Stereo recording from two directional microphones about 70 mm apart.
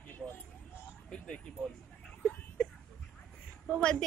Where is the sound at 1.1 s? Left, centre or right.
Centre.